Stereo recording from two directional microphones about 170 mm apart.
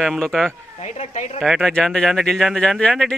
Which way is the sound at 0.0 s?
Centre (ahead or behind).